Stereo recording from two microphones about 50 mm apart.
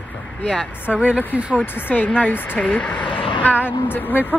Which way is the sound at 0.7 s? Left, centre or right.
Left.